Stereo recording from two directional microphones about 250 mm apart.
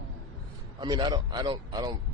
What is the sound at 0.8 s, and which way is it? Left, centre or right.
A man's voice, centre.